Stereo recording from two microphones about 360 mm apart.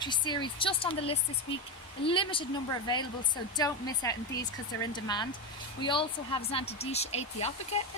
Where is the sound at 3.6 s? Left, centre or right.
Centre.